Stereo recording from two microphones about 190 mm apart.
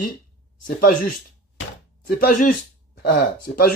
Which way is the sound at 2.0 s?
50° left (ahead or behind).